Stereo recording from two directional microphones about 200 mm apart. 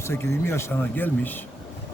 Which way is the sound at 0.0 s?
15° left (ahead or behind).